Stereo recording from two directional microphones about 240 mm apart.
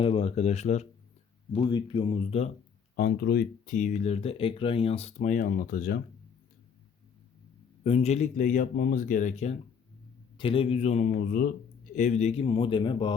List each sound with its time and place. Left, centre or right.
0.0 s speech: left
2.9 s speech: left
7.9 s speech: left